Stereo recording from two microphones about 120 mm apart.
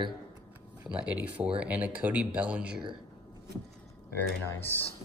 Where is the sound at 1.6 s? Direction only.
10° right (ahead or behind).